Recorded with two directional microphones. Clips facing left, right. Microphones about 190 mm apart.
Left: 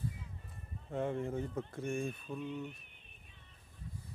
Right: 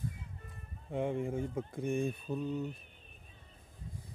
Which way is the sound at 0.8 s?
15° right (ahead or behind).